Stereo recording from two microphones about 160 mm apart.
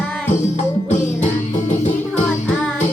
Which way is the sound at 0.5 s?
50° left (ahead or behind).